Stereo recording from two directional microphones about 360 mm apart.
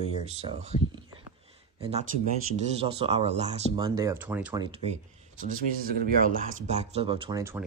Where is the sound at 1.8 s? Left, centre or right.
Centre.